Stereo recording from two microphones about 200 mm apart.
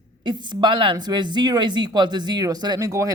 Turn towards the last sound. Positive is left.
turn(degrees=-15)  # may be behind; listen again after turning